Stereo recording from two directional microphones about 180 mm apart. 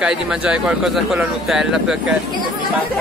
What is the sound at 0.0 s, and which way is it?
Speech, 5° right (ahead or behind).